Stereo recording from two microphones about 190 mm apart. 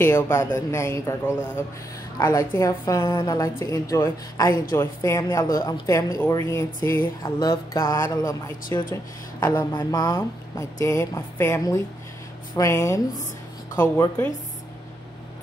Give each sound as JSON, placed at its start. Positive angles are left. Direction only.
{"t": 0.0, "sound": "speech", "side_deg": 15}